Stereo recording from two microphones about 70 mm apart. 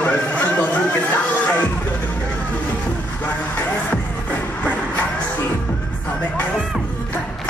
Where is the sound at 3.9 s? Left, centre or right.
Left.